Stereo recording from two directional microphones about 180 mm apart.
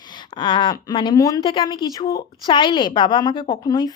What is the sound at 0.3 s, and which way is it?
A woman's voice, 25° left (ahead or behind).